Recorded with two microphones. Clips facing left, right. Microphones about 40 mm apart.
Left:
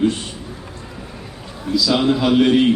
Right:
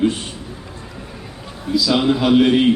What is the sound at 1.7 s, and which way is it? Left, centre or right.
A man's voice, centre.